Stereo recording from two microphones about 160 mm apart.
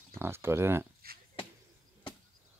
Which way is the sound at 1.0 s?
70° right (ahead or behind).